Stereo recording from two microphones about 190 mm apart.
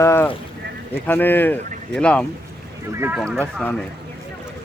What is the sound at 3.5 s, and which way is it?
Speech, 5° left (ahead or behind).